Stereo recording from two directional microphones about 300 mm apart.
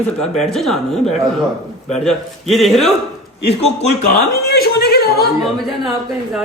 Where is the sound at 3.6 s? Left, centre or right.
Left.